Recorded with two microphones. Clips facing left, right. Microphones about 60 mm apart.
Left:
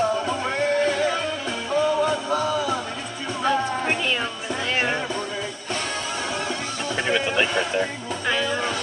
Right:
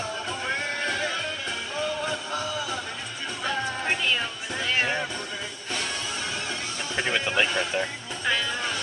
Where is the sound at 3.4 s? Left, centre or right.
Centre.